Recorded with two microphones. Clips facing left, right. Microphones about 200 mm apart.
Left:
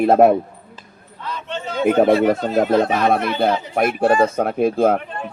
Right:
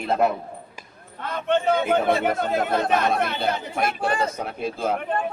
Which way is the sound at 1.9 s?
55° left (ahead or behind).